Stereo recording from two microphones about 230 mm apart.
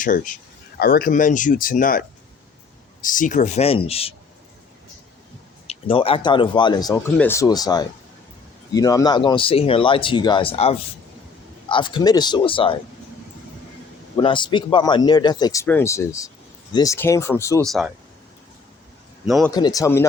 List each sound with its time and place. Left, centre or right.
0.0 s speech: left
5.6 s speech: left
14.2 s speech: left
17.7 s speech: centre
19.2 s speech: centre
19.5 s speech: centre